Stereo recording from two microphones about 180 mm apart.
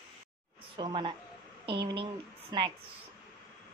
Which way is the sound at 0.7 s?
25° right (ahead or behind).